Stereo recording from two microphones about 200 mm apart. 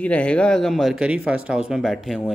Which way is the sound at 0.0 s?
5° left (ahead or behind).